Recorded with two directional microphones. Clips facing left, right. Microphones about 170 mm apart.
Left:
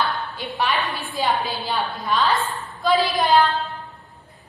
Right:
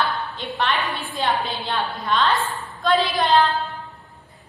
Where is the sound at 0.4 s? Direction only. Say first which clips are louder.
Left 1 dB; 5° left (ahead or behind).